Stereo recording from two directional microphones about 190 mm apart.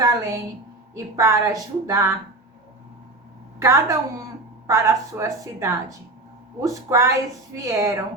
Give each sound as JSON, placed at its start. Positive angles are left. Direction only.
{"t": 0.0, "sound": "a woman's voice", "side_deg": -20}
{"t": 3.6, "sound": "a woman's voice", "side_deg": -15}